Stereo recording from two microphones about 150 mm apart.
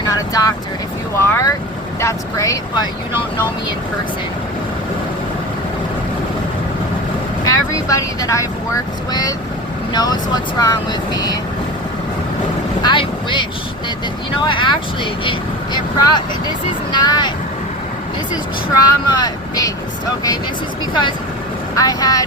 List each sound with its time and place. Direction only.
0.1 s speech: 25° left (ahead or behind)
7.4 s speech: 20° left (ahead or behind)
9.9 s speech: 30° left (ahead or behind)
12.8 s speech: 30° left (ahead or behind)
18.8 s speech: 25° left (ahead or behind)
21.8 s speech: 25° left (ahead or behind)